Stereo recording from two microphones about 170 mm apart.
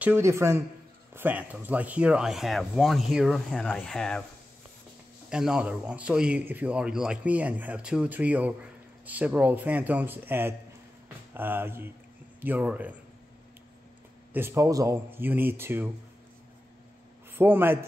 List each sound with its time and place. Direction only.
0.0 s a man's voice: 15° right (ahead or behind); by 4.2 s 5° left (ahead or behind)
5.3 s a man's voice: 5° right (ahead or behind)
14.3 s a man's voice: 15° right (ahead or behind)
17.3 s a man's voice: 10° right (ahead or behind)